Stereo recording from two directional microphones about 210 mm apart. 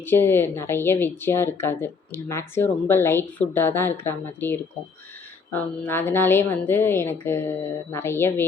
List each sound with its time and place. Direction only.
0.0 s a woman's voice: 10° left (ahead or behind)